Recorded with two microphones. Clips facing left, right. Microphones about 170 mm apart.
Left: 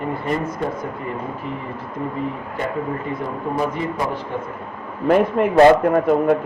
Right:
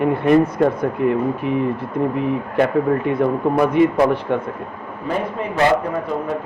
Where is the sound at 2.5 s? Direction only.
75° right (ahead or behind).